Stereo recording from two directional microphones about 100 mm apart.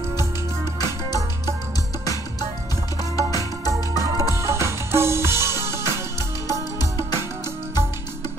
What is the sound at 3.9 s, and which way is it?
Music, 35° right (ahead or behind).